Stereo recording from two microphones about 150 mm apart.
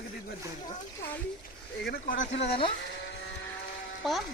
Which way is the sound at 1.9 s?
70° left (ahead or behind).